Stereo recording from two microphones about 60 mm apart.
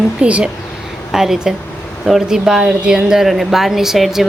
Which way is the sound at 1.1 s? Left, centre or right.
Centre.